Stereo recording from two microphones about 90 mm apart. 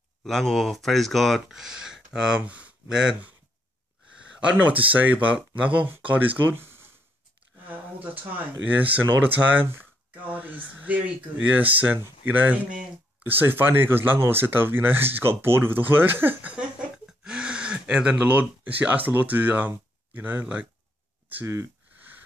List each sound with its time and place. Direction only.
0.2 s speech: 5° left (ahead or behind)
4.2 s a sound: 10° right (ahead or behind)
4.6 s speech: 15° right (ahead or behind)